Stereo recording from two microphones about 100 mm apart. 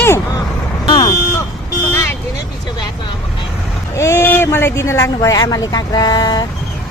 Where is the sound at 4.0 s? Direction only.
25° left (ahead or behind); by 6.5 s 45° left (ahead or behind).